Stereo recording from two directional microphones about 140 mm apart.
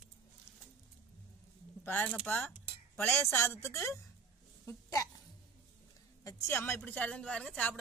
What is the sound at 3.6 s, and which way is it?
Speech, 20° left (ahead or behind).